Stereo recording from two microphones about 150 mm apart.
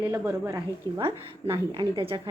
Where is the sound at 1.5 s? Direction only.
35° right (ahead or behind).